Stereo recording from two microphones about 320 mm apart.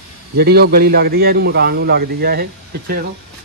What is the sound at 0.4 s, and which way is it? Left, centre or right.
A man's voice, right.